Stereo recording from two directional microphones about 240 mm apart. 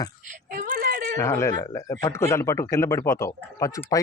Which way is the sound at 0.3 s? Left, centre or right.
Right.